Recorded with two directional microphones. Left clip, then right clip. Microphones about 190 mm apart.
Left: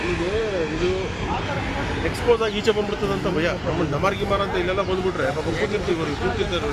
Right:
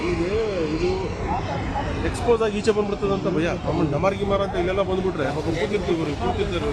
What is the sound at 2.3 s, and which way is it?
Speech, 60° right (ahead or behind).